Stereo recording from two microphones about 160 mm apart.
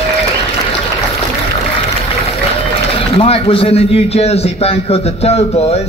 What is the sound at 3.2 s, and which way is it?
A man's voice, 35° left (ahead or behind).